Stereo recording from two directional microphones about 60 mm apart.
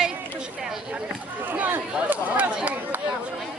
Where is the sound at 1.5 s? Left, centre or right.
Right.